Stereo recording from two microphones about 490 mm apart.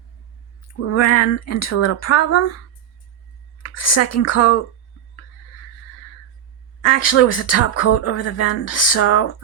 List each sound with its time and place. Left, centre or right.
0.7 s a woman's voice: left
3.6 s speech: left
6.8 s speech: left